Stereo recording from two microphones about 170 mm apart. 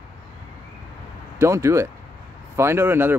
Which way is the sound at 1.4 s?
15° right (ahead or behind).